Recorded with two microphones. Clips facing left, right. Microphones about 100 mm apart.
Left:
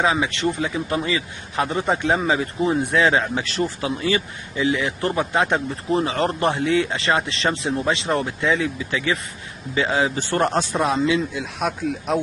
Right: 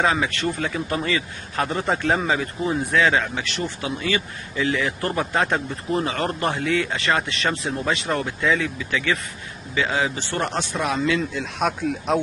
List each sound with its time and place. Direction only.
0.0 s speech: 10° left (ahead or behind)
0.3 s speech: 20° left (ahead or behind)
0.6 s speech: 10° left (ahead or behind)
0.8 s speech: 20° left (ahead or behind)
2.3 s speech: 25° left (ahead or behind)
10.1 s a man's voice: 40° left (ahead or behind)
10.6 s speech: 25° left (ahead or behind)
11.1 s speech: 5° left (ahead or behind)